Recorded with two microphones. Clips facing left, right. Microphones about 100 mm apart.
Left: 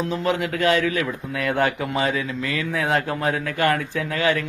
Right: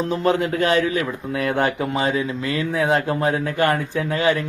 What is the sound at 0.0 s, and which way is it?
A man's voice, 35° right (ahead or behind).